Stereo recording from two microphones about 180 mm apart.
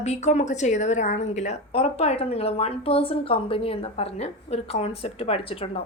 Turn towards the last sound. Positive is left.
turn(degrees=30)  # may be behind; listen again after turning